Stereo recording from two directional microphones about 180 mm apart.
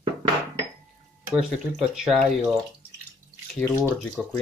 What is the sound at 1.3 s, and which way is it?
Speech, 5° right (ahead or behind).